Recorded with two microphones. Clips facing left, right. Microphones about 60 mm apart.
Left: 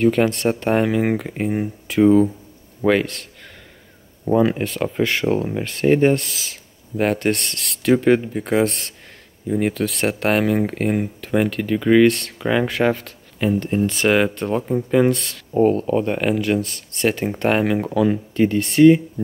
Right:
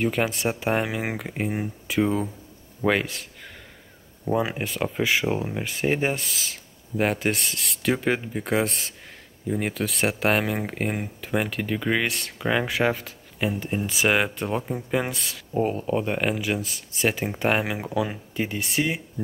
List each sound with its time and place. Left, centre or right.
0.0 s speech: centre
4.4 s speech: centre